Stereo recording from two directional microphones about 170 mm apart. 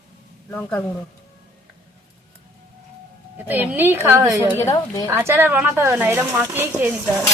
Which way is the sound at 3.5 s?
10° right (ahead or behind).